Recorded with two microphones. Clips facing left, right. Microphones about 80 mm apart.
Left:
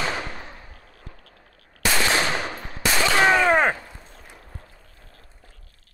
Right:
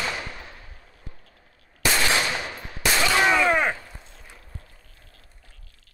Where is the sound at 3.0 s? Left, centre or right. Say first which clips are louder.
Left 2 dB; left.